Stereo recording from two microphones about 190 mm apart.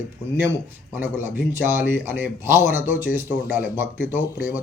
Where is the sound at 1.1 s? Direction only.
10° right (ahead or behind).